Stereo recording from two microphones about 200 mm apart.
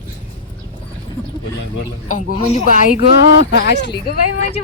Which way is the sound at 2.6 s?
40° left (ahead or behind).